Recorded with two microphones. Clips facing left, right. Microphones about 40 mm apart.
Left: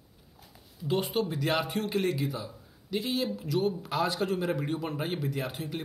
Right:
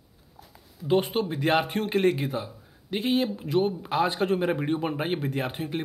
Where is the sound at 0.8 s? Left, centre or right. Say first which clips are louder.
Right 5 dB; right.